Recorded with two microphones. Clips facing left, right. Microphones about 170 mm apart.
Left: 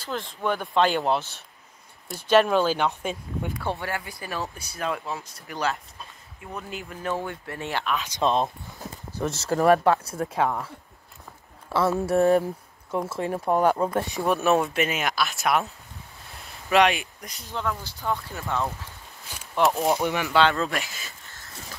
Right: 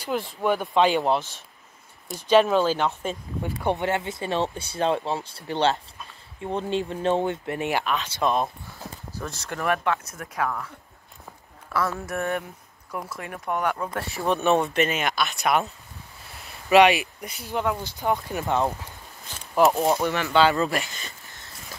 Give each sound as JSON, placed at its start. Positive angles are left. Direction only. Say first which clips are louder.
{"t": 0.0, "sound": "speech", "louder": "right 3 dB", "side_deg": -10}
{"t": 3.6, "sound": "speech", "louder": "right 9 dB", "side_deg": -20}
{"t": 8.1, "sound": "speech", "louder": "left 2 dB", "side_deg": 25}
{"t": 11.7, "sound": "speech", "louder": "left 5 dB", "side_deg": 25}
{"t": 13.9, "sound": "speech", "louder": "left 5 dB", "side_deg": 20}
{"t": 14.2, "sound": "speech", "louder": "right 1 dB", "side_deg": 5}
{"t": 17.5, "sound": "speech", "louder": "right 4 dB", "side_deg": -15}
{"t": 19.5, "sound": "speech", "louder": "right 2 dB", "side_deg": 0}
{"t": 20.0, "sound": "speech", "louder": "even", "side_deg": 15}
{"t": 20.3, "sound": "speech", "louder": "right 2 dB", "side_deg": 0}